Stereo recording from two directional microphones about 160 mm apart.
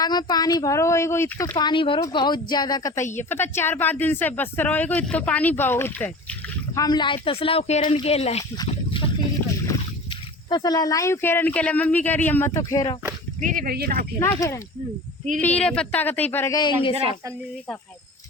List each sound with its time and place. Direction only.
0.0 s speech: 25° left (ahead or behind)
1.5 s speech: 30° left (ahead or behind); by 6.1 s 15° left (ahead or behind)
6.7 s speech: 25° left (ahead or behind)
8.5 s a sound: 30° left (ahead or behind)
9.7 s a sound: 20° left (ahead or behind)
10.1 s speech: 25° left (ahead or behind)
12.5 s speech: 20° left (ahead or behind)
13.4 s speech: 55° right (ahead or behind)
14.2 s speech: 20° left (ahead or behind)
16.6 s speech: 30° left (ahead or behind)